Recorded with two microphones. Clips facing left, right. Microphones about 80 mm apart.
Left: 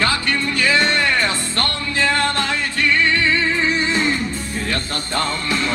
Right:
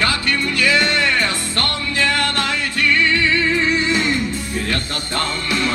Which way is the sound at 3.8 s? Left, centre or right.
Left.